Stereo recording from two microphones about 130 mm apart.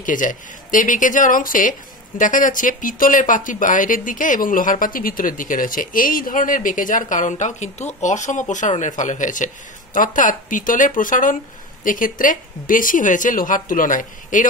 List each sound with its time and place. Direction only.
0.0 s speech: 90° left
9.9 s speech: 90° left